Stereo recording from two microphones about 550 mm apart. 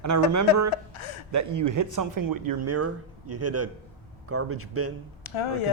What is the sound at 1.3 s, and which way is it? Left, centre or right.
Speech, right.